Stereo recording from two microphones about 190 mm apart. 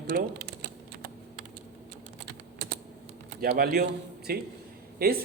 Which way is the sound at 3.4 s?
50° right (ahead or behind).